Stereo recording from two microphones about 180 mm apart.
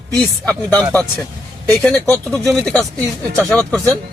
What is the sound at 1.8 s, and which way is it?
Speech, 5° left (ahead or behind).